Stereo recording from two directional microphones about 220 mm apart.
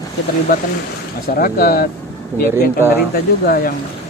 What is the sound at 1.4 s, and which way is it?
Speech, 40° left (ahead or behind).